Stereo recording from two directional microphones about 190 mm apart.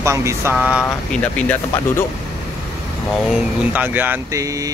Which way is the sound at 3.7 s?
10° right (ahead or behind).